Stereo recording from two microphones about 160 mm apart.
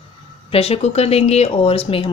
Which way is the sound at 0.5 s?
40° left (ahead or behind).